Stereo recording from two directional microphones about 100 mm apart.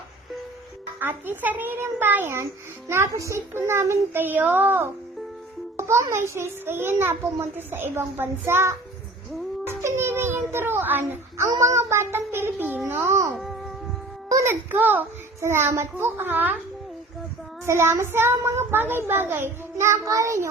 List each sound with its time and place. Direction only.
0.9 s a child's voice: 20° right (ahead or behind)
9.6 s child singing: 25° right (ahead or behind)
11.6 s a child's voice: 30° right (ahead or behind)
13.3 s music: centre (ahead or behind)
14.3 s a sound: 35° right (ahead or behind)
14.7 s a child's voice: 20° right (ahead or behind)
17.7 s a child's voice: 25° right (ahead or behind)